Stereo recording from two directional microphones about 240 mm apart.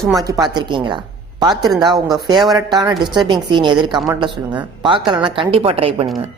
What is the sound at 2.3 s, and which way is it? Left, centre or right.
Speech, centre.